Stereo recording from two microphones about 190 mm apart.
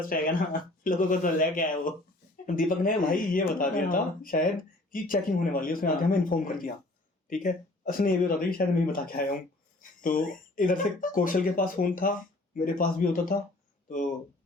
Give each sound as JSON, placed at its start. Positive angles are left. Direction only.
{"t": 0.1, "sound": "speech", "side_deg": 45}